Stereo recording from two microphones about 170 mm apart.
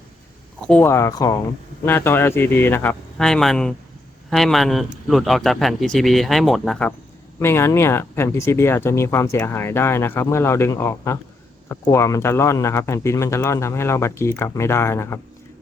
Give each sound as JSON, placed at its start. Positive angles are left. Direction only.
{"t": 0.7, "sound": "a man's voice", "side_deg": 15}